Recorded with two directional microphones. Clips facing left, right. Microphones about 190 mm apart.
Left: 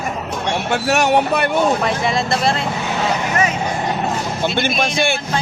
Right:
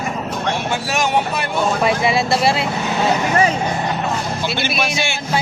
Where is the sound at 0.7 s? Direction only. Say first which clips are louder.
Left 6 dB; 65° left (ahead or behind).